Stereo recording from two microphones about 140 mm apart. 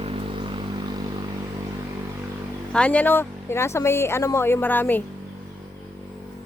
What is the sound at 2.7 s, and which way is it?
Speech, 10° left (ahead or behind).